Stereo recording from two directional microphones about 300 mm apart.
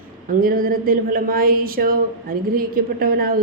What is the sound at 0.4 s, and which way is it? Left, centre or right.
Speech, right.